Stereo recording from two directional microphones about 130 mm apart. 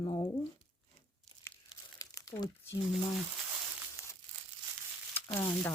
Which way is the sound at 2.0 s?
25° left (ahead or behind).